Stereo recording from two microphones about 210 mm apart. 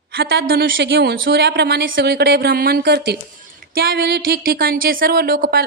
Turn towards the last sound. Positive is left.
turn(degrees=-45)  # may be behind; listen again after turning